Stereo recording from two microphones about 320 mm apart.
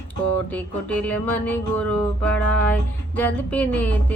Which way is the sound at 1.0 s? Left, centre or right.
Centre.